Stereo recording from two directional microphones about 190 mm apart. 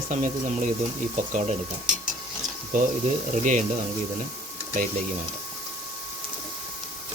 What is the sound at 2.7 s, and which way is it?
Speech, 40° right (ahead or behind).